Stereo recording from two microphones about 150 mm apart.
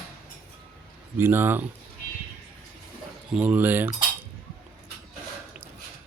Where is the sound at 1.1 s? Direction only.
15° right (ahead or behind).